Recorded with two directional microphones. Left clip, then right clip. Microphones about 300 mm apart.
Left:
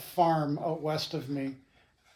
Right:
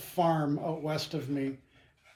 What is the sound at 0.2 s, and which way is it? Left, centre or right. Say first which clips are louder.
Speech: left 2 dB; centre.